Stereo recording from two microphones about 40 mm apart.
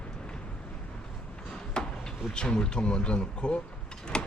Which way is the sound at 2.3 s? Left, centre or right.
Left.